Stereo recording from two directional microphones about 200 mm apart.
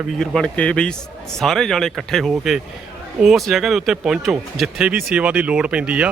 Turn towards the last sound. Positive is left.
turn(degrees=-5)  # may be behind; listen again after turning